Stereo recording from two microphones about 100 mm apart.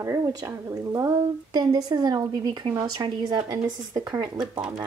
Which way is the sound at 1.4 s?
40° right (ahead or behind).